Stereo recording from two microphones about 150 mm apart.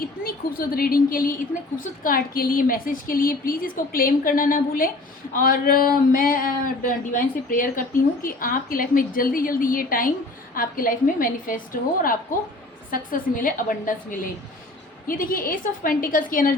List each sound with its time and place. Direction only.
0.0 s a woman's voice: 75° left (ahead or behind)